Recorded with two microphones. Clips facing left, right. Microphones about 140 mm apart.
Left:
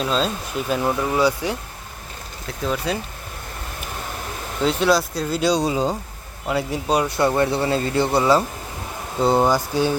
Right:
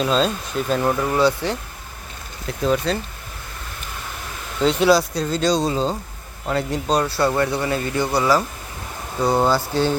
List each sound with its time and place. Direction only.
0.0 s speech: centre (ahead or behind)
2.5 s speech: centre (ahead or behind)
4.6 s speech: centre (ahead or behind)